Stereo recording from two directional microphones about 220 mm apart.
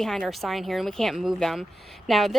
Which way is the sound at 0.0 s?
Centre (ahead or behind).